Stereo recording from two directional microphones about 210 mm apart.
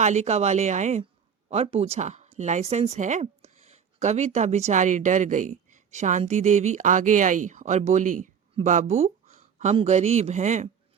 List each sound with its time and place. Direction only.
0.0 s speech: 35° right (ahead or behind)